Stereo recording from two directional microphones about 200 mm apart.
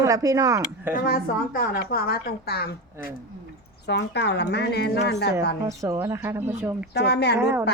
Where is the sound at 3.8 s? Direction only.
55° left (ahead or behind).